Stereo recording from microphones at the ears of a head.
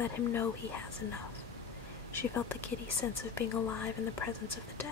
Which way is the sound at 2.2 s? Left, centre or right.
Left.